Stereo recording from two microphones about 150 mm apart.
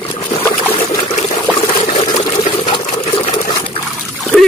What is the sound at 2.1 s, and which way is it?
Water, 35° left (ahead or behind).